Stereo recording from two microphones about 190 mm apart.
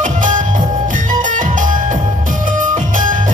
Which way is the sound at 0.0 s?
45° right (ahead or behind).